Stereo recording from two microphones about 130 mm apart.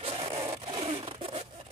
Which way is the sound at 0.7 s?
45° right (ahead or behind).